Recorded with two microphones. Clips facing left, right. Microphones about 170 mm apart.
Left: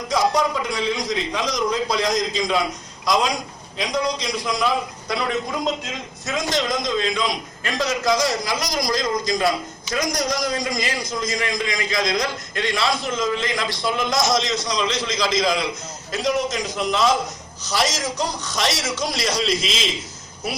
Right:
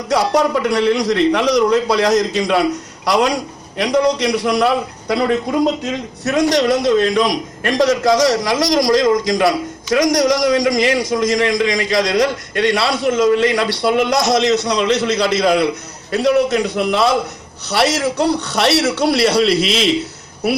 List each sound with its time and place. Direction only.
0.1 s a man's voice: 65° right (ahead or behind)